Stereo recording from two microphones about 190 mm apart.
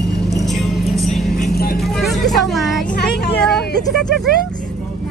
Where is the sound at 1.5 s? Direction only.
55° left (ahead or behind).